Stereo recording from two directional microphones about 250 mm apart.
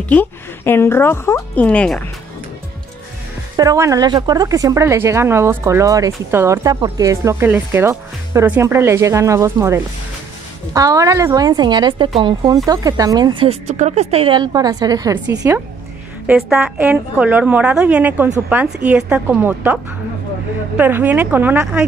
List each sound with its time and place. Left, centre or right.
0.1 s speech: centre
3.5 s a woman's voice: centre